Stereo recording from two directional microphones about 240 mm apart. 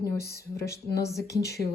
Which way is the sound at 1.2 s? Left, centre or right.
Left.